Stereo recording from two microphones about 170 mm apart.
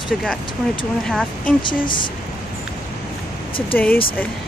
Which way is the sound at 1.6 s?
30° left (ahead or behind).